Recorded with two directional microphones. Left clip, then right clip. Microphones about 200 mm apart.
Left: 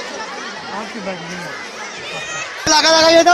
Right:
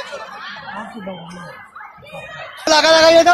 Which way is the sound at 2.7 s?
40° right (ahead or behind).